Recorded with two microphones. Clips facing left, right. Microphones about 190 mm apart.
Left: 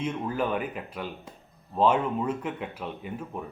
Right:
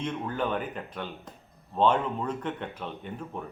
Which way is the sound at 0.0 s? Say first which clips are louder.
Left 2 dB; 5° left (ahead or behind).